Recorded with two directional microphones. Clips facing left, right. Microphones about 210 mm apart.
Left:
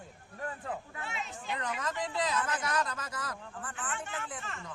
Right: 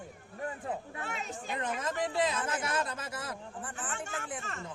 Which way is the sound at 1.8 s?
25° right (ahead or behind).